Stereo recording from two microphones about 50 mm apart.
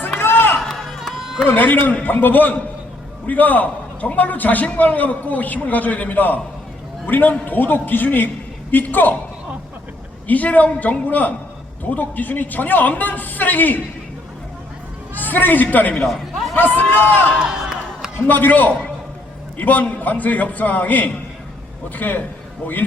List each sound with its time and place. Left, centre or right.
0.2 s run: left
0.6 s a sound: centre
1.5 s a man's voice: left
10.2 s a man's voice: left
15.2 s a man's voice: left
16.0 s a sound: centre
16.6 s a man's voice: left
17.6 s a sound: centre
18.3 s a man's voice: left